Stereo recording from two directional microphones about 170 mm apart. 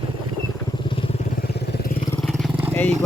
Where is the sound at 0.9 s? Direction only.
35° left (ahead or behind).